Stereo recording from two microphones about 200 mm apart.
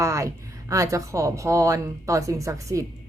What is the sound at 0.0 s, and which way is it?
Speech, 15° right (ahead or behind).